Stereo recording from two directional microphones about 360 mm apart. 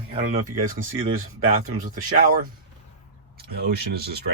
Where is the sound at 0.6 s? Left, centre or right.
Right.